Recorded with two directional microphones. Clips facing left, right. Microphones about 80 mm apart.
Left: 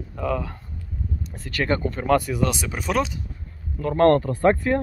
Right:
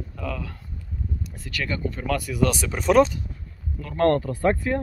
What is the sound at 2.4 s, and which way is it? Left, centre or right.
Speech, centre.